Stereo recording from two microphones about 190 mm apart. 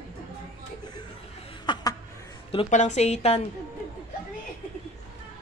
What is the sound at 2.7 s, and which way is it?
Speech, 40° left (ahead or behind).